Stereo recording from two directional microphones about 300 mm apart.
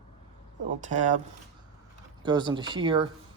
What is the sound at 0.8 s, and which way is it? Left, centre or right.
Speech, right.